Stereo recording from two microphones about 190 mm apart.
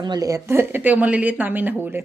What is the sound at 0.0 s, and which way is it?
A woman's voice, 20° right (ahead or behind).